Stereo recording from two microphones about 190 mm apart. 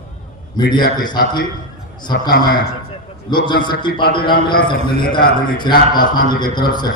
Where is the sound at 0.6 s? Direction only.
25° left (ahead or behind).